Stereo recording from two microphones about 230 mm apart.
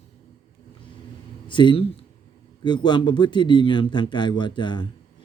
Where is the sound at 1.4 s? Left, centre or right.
Left.